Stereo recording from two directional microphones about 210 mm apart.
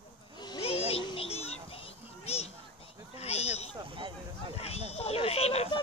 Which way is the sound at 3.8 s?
25° right (ahead or behind).